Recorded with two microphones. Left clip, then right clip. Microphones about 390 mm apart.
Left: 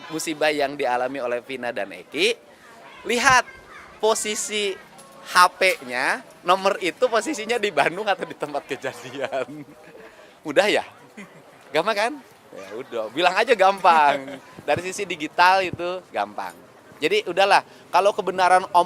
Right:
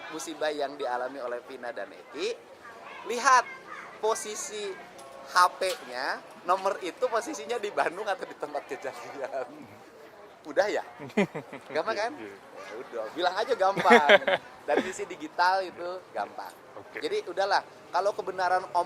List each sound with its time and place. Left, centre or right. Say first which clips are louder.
0.2 s a man's voice: left 9 dB; left
3.1 s a man's voice: left 5 dB; left
4.0 s a man's voice: left 8 dB; left
11.2 s speech: right 17 dB; right
11.8 s speech: left 8 dB; left
13.2 s speech: left 9 dB; left
14.7 s speech: left 4 dB; left
17.1 s a man's voice: left 9 dB; left